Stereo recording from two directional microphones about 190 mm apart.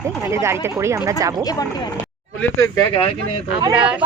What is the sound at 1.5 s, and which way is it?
Speech, 20° left (ahead or behind).